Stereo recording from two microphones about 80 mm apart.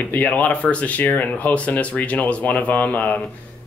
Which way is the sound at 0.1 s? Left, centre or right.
Centre.